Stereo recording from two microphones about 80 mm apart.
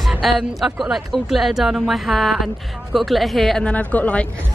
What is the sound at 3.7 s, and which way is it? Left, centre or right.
Speech, centre.